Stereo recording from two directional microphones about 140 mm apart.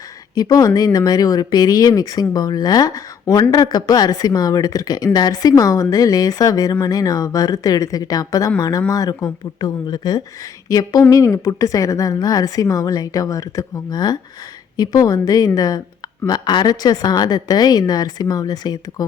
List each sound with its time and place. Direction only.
0.3 s speech: 30° left (ahead or behind)